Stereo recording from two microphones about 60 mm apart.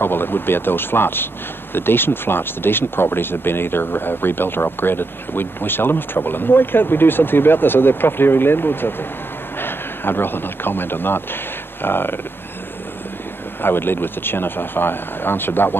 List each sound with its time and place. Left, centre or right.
0.0 s a man's voice: left
13.6 s speech: left